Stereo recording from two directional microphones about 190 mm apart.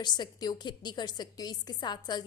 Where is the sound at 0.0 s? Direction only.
25° left (ahead or behind).